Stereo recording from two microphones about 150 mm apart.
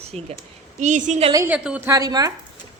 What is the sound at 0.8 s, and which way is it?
Speech, 55° right (ahead or behind).